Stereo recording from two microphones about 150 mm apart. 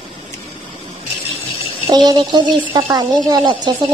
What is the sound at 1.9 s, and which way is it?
Speech, 25° right (ahead or behind).